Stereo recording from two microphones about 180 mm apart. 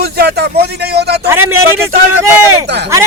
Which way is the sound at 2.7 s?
70° right (ahead or behind).